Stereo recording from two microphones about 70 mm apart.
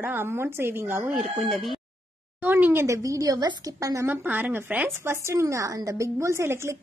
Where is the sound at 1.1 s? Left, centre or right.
Centre.